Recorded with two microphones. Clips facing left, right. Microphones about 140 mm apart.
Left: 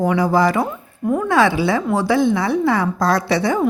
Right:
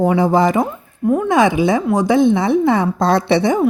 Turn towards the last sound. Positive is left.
turn(degrees=-20)  # may be behind; listen again after turning